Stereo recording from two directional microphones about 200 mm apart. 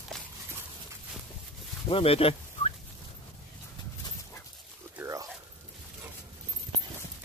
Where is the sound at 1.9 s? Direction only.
25° left (ahead or behind).